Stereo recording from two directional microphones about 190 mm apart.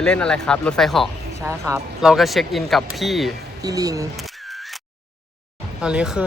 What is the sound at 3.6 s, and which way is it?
Speech, 20° right (ahead or behind).